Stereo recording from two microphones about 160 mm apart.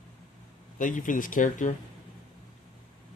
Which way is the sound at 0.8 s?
55° left (ahead or behind).